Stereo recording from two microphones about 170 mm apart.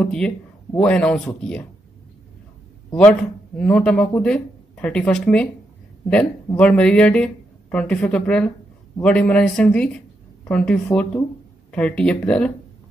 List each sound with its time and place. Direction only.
0.0 s speech: 5° left (ahead or behind)
2.9 s speech: 5° left (ahead or behind)